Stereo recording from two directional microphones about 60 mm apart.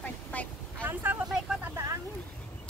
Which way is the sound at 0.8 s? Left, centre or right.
Right.